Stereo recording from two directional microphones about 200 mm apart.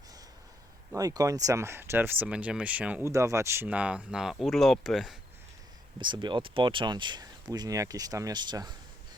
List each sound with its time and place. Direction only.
0.9 s speech: 15° right (ahead or behind); by 5.1 s centre (ahead or behind)
6.0 s speech: 20° right (ahead or behind)